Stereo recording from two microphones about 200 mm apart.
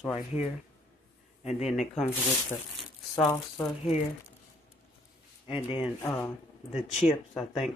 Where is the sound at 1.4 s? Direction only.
35° left (ahead or behind).